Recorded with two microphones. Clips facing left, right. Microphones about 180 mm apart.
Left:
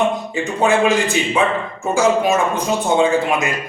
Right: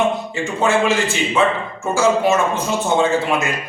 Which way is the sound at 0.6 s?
15° left (ahead or behind).